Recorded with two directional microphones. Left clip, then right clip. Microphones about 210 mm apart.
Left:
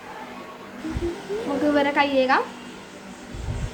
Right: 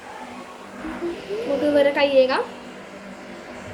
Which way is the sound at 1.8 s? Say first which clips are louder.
Right 5 dB; 25° left (ahead or behind).